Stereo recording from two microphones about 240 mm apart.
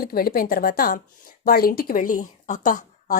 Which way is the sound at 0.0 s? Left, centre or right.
Left.